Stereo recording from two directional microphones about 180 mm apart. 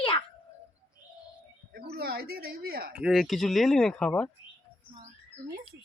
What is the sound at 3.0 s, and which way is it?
Speech, centre (ahead or behind).